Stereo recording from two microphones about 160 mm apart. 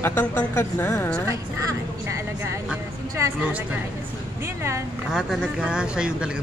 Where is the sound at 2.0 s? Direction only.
20° right (ahead or behind).